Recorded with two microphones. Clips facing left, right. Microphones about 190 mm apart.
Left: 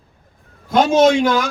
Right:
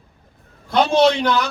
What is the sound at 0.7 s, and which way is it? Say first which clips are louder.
Speech: left 3 dB; 45° left (ahead or behind).